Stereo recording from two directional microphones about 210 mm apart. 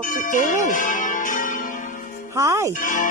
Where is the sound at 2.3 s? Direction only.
15° right (ahead or behind).